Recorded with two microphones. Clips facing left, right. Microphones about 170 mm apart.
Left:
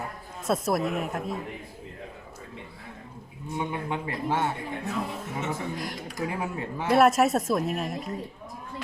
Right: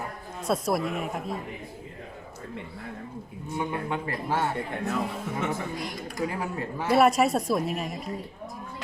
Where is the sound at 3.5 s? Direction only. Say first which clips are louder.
Right 1 dB; 20° left (ahead or behind).